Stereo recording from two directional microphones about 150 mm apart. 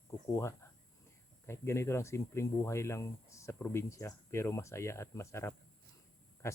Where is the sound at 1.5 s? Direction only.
15° left (ahead or behind).